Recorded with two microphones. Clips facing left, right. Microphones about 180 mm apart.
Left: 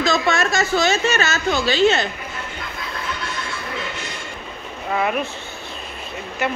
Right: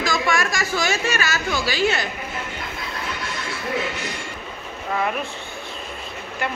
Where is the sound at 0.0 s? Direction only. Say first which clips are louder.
Left 3 dB; 25° left (ahead or behind).